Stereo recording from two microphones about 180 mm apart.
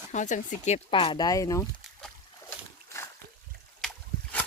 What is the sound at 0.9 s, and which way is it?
Speech, 30° left (ahead or behind).